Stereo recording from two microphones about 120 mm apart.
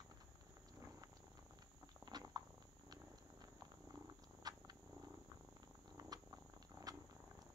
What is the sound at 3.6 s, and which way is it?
Purr, 35° right (ahead or behind).